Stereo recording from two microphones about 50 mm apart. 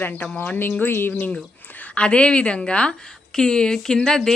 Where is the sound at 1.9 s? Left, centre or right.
Left.